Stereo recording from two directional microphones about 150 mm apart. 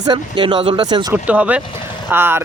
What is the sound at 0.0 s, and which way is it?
Speech, 30° right (ahead or behind).